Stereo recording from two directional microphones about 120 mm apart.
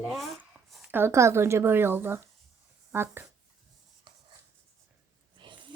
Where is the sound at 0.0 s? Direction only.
Centre (ahead or behind).